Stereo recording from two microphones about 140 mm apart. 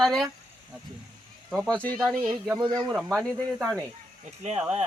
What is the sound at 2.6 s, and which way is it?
Speech, 30° right (ahead or behind).